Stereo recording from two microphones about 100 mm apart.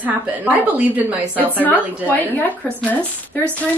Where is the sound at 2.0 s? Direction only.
20° left (ahead or behind).